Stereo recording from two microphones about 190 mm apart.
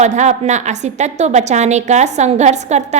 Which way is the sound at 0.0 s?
40° right (ahead or behind).